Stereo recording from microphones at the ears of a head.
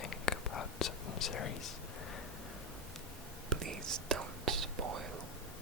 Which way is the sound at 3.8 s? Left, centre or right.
Right.